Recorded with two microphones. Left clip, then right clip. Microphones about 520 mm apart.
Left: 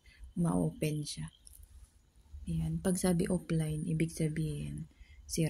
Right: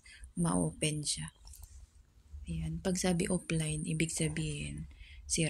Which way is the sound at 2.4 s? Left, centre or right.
Left.